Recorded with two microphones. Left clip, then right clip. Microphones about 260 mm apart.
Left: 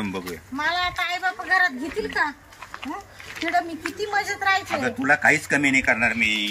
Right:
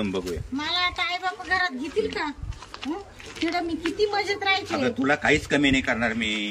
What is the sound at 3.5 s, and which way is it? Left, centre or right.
A woman's voice, centre.